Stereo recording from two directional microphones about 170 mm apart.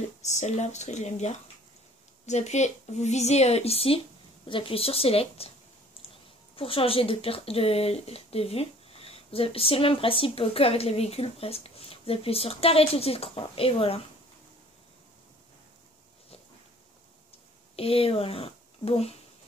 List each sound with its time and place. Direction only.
0.2 s speech: 40° left (ahead or behind)
17.7 s speech: 35° left (ahead or behind)